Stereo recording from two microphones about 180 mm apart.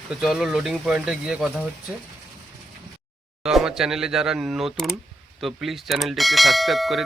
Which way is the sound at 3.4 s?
5° right (ahead or behind).